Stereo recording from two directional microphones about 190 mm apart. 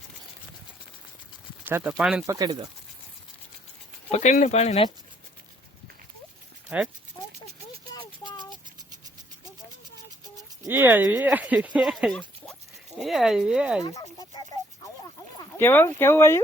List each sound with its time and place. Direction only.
1.6 s speech: 10° right (ahead or behind)
2.2 s speech: 20° right (ahead or behind)
4.1 s speech: 40° left (ahead or behind)
6.7 s speech: 5° right (ahead or behind)
7.9 s a sound: 25° left (ahead or behind)
10.3 s speech: 15° right (ahead or behind)
13.8 s a sound: 20° left (ahead or behind)
15.5 s speech: 10° left (ahead or behind)